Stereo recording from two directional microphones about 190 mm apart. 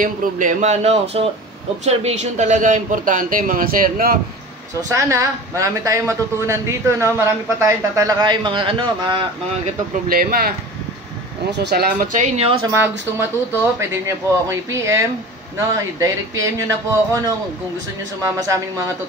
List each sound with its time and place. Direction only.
0.0 s a man's voice: 45° right (ahead or behind)
4.9 s a woman's voice: 15° right (ahead or behind)
10.0 s a man's voice: 50° right (ahead or behind)
11.5 s speech: 60° right (ahead or behind)
12.4 s speech: 30° right (ahead or behind)
12.7 s a woman's voice: 10° right (ahead or behind)